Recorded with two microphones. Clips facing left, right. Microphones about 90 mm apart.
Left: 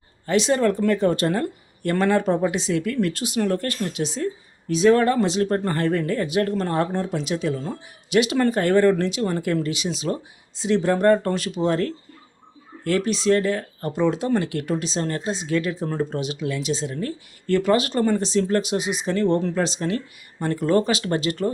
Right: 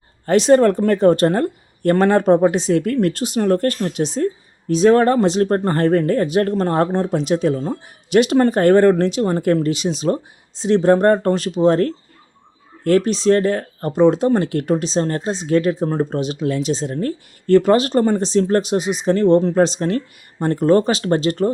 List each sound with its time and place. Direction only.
0.3 s speech: 45° right (ahead or behind)